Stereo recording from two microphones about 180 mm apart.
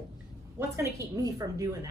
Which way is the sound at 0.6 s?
15° right (ahead or behind).